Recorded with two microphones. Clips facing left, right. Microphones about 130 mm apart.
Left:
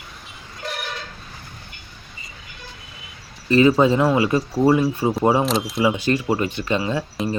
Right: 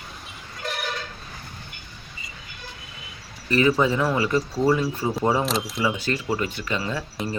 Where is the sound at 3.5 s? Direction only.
25° left (ahead or behind).